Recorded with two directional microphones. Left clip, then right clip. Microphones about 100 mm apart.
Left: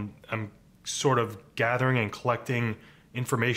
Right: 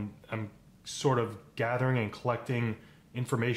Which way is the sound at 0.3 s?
25° left (ahead or behind).